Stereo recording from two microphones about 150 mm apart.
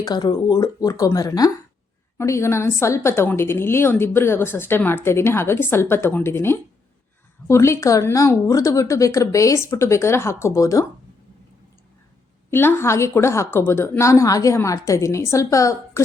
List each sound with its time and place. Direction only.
0.0 s a woman's voice: 30° left (ahead or behind)
12.5 s a woman's voice: 15° left (ahead or behind)